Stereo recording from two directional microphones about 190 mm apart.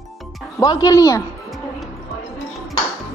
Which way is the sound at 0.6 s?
20° left (ahead or behind).